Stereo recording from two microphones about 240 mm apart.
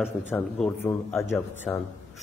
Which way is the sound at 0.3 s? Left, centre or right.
Centre.